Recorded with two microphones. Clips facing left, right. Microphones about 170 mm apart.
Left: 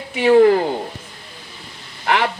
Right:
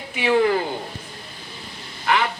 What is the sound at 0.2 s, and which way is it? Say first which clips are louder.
Speech: left 7 dB; 40° left (ahead or behind).